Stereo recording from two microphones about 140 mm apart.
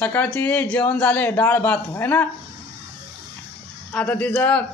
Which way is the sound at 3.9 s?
10° left (ahead or behind).